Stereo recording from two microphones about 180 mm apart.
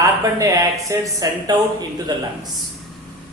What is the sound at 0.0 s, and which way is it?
Speech, 20° right (ahead or behind).